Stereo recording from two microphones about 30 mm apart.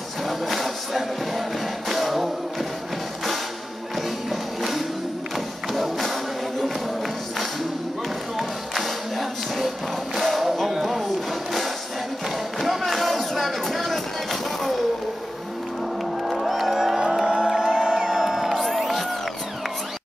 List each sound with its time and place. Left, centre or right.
0.3 s music: centre
4.3 s music: centre
5.8 s music: centre
8.4 s music: centre
10.8 s a sound: centre
12.5 s a sound: centre
13.0 s music: centre
16.3 s music: centre; by 18.1 s right
18.1 s music: centre
18.8 s music: centre